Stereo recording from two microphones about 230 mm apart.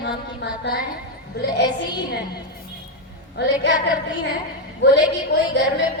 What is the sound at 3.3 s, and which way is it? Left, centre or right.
Speech, left.